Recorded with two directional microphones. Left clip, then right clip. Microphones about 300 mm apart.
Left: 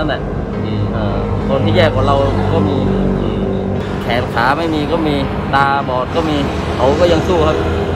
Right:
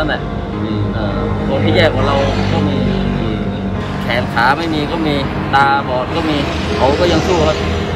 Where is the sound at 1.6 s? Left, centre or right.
Centre.